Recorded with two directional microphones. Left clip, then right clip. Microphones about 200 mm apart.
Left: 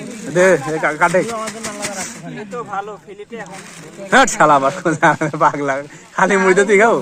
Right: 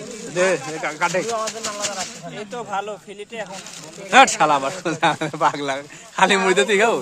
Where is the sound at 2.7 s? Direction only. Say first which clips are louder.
Even; 50° right (ahead or behind).